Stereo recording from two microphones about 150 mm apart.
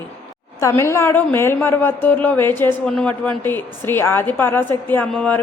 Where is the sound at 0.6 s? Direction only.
20° left (ahead or behind).